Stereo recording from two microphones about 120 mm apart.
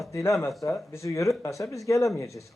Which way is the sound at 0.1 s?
25° left (ahead or behind).